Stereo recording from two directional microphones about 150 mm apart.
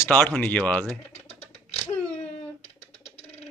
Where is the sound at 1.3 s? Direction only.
45° left (ahead or behind).